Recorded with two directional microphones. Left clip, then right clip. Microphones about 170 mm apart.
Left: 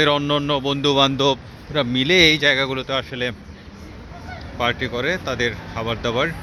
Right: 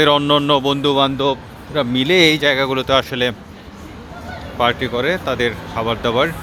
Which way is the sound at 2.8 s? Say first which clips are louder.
Right 8 dB; 20° right (ahead or behind).